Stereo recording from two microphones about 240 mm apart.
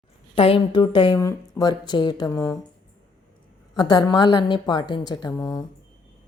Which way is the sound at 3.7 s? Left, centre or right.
Centre.